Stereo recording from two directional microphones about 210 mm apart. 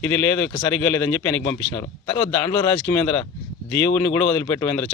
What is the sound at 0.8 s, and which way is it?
A man's voice, 10° left (ahead or behind).